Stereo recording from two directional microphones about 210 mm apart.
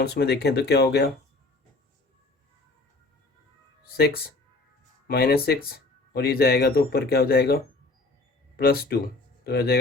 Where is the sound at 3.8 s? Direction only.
45° left (ahead or behind).